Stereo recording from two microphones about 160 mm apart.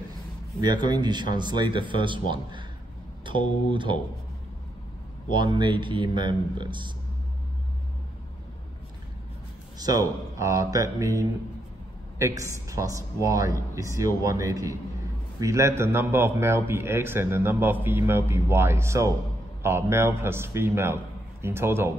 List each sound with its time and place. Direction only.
0.6 s speech: 25° right (ahead or behind)
5.3 s speech: 30° right (ahead or behind)
9.8 s a man's voice: 25° right (ahead or behind)